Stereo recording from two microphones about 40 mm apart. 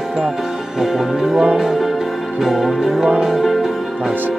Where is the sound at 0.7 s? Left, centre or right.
Centre.